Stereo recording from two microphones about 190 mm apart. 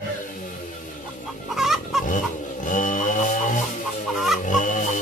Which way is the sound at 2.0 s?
45° left (ahead or behind).